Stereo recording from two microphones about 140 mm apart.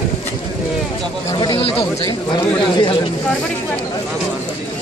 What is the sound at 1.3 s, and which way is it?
Speech, 30° left (ahead or behind).